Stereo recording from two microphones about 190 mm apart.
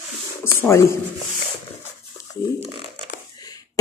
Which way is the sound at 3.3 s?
20° left (ahead or behind).